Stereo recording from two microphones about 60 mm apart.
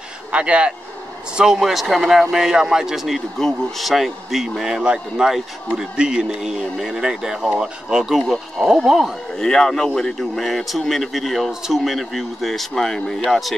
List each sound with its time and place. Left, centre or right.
0.3 s speech: centre
3.3 s speech: centre
9.4 s speech: centre